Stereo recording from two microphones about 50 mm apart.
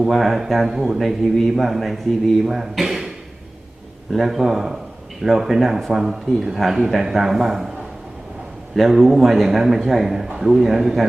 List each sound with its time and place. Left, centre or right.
0.0 s speech: centre
4.1 s speech: centre
8.7 s a man's voice: centre